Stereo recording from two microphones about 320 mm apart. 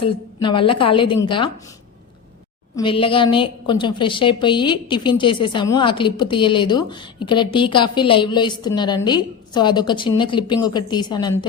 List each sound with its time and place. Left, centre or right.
0.0 s a woman's voice: centre
2.7 s a woman's voice: centre